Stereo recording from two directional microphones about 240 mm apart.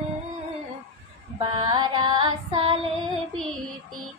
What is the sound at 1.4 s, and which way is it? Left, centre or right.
Music, centre.